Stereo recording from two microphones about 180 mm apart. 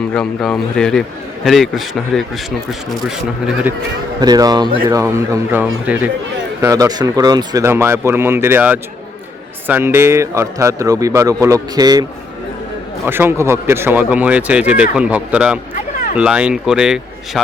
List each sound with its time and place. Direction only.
0.1 s speech: 5° left (ahead or behind)
4.2 s speech: 20° right (ahead or behind)
13.1 s speech: 10° right (ahead or behind)